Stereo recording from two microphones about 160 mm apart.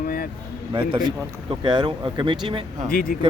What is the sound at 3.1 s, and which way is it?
Speech, 65° left (ahead or behind).